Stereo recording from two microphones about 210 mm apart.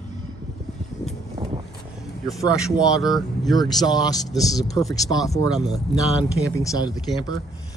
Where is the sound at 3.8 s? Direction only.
20° left (ahead or behind).